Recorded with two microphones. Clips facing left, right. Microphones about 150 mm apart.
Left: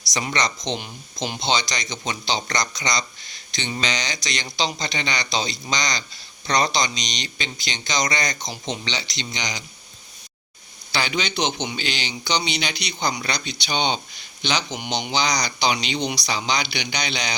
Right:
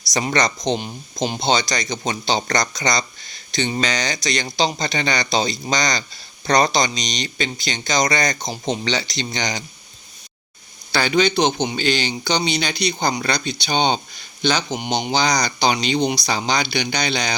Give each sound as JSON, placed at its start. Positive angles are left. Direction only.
{"t": 0.1, "sound": "speech", "side_deg": -45}
{"t": 0.8, "sound": "speech", "side_deg": -30}
{"t": 1.4, "sound": "speech", "side_deg": -50}
{"t": 10.9, "sound": "speech", "side_deg": -50}